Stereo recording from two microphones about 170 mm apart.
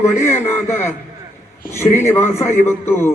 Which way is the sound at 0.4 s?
15° left (ahead or behind).